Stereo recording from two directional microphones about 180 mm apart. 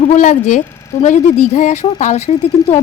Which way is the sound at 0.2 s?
45° left (ahead or behind).